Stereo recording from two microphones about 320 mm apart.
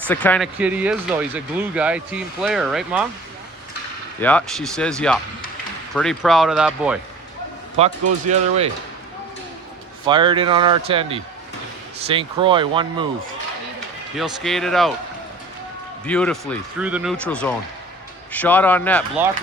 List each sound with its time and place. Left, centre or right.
0.1 s speech: centre
4.2 s speech: centre
7.8 s speech: centre
10.1 s speech: centre
14.2 s speech: centre
16.0 s speech: centre